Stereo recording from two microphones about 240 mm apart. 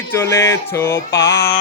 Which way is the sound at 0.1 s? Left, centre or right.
Centre.